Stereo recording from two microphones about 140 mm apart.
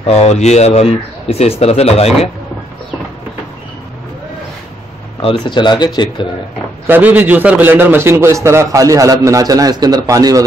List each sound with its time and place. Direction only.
0.0 s speech: 50° left (ahead or behind)
5.2 s speech: 35° left (ahead or behind)
6.9 s a man's voice: 10° right (ahead or behind)